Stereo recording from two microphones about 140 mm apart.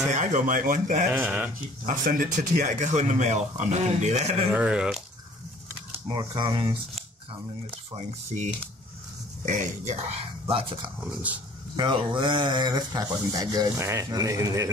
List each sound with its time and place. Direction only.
0.1 s speech: 65° right (ahead or behind)
1.1 s speech: 15° right (ahead or behind)
1.9 s speech: 65° right (ahead or behind)
4.5 s speech: 5° right (ahead or behind)
6.0 s speech: 30° right (ahead or behind)
8.3 s speech: 60° right (ahead or behind)
10.5 s speech: 40° right (ahead or behind)